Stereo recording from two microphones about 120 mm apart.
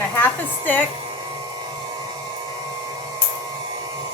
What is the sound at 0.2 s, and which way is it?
Speech, 15° left (ahead or behind).